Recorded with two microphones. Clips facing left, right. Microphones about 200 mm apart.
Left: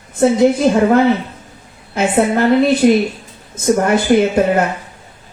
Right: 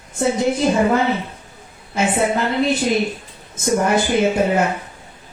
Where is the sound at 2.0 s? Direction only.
60° left (ahead or behind).